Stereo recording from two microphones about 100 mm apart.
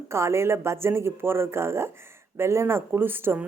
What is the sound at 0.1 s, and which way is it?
A woman's voice, 25° right (ahead or behind).